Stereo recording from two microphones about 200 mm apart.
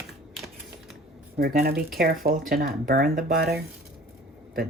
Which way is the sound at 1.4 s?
50° right (ahead or behind).